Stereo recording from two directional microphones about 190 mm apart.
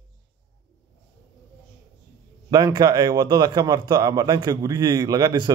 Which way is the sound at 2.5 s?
20° right (ahead or behind).